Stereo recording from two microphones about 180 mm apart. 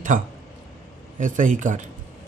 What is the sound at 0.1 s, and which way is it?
Speech, 45° right (ahead or behind).